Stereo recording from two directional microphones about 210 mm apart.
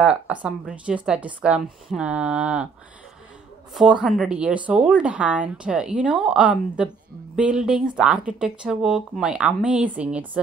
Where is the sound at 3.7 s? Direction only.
5° right (ahead or behind).